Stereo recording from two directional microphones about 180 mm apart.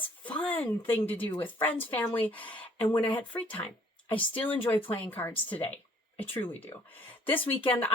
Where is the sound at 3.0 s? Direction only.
25° left (ahead or behind).